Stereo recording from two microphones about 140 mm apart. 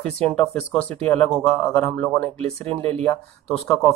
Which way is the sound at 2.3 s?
45° right (ahead or behind).